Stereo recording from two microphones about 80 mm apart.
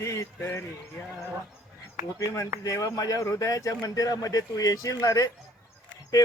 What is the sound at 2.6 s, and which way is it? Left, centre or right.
A man's voice, left.